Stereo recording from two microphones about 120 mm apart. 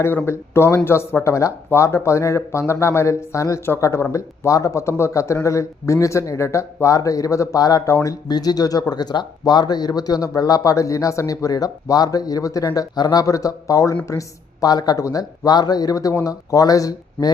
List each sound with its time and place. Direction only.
0.3 s speech: 20° left (ahead or behind)